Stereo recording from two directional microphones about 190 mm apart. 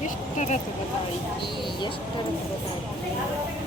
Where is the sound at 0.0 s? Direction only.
40° left (ahead or behind).